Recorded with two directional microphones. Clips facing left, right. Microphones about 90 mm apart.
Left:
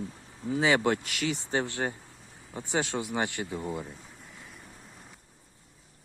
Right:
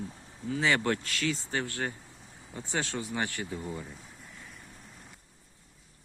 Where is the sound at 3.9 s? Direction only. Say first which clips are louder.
Even; centre (ahead or behind).